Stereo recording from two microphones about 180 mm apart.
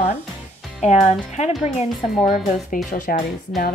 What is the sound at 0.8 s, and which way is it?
Speech, 40° left (ahead or behind).